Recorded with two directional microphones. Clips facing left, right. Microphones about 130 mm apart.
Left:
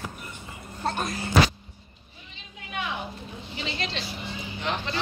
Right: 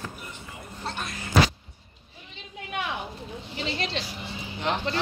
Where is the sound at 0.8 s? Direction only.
45° left (ahead or behind).